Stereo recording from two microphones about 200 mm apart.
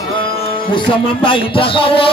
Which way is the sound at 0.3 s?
25° left (ahead or behind).